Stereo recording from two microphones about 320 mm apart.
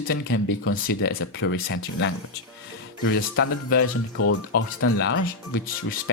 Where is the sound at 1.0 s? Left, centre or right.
Left.